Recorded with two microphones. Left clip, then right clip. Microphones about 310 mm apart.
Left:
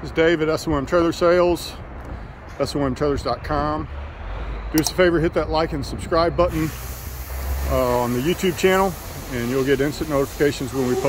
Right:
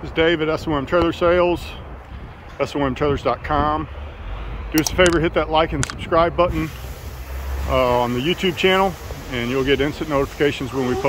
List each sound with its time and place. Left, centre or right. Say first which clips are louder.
0.0 s speech: even; centre
2.6 s speech: right 1 dB; centre
7.7 s speech: right 3 dB; centre